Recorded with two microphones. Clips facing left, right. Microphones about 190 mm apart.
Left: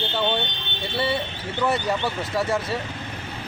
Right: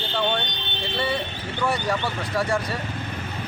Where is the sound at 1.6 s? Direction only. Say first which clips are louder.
Left 1 dB; 20° left (ahead or behind).